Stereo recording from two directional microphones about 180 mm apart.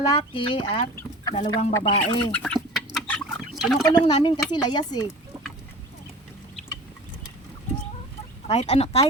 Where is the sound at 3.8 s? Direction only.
20° left (ahead or behind).